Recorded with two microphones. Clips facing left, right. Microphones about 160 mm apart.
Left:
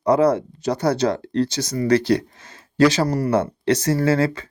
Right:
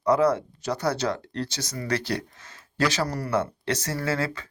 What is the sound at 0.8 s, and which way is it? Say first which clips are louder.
Speech: left 7 dB; 30° left (ahead or behind).